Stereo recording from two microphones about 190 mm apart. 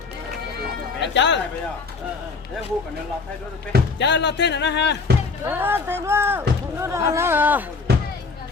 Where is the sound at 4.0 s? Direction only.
65° left (ahead or behind).